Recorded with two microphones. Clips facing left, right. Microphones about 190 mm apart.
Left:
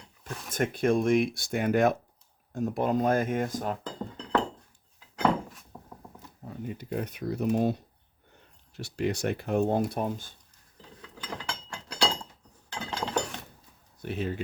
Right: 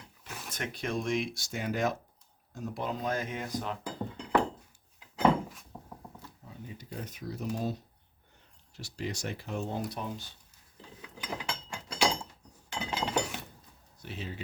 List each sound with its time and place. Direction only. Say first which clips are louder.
0.5 s speech: left 10 dB; 50° left (ahead or behind)
3.8 s chink: even; 10° right (ahead or behind)
5.7 s zipper: left 1 dB; 10° right (ahead or behind)
6.4 s speech: left 10 dB; 60° left (ahead or behind)
11.0 s a sound: even; 10° right (ahead or behind)
12.7 s chink: left 1 dB; 15° right (ahead or behind)
14.0 s speech: left 9 dB; 55° left (ahead or behind)